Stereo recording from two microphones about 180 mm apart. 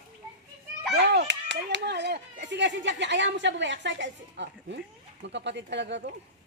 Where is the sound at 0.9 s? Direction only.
70° right (ahead or behind).